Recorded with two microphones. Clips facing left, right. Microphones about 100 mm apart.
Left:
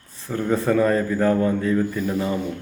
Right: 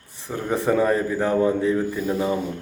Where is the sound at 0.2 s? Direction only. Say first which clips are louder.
Left 2 dB; 15° right (ahead or behind).